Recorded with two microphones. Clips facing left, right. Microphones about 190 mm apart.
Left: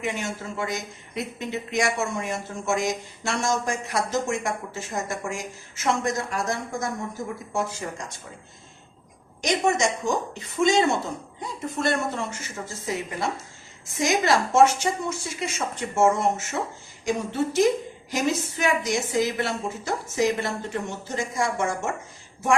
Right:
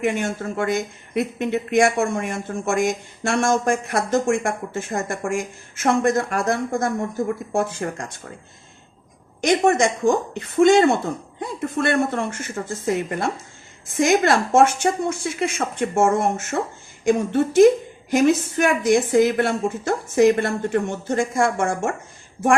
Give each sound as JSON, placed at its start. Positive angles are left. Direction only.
{"t": 0.0, "sound": "speech", "side_deg": -55}
{"t": 9.4, "sound": "speech", "side_deg": -55}